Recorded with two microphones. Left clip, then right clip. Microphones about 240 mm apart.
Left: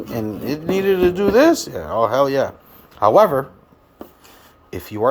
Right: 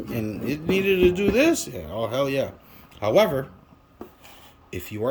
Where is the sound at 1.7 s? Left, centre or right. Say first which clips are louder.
Left 10 dB; left.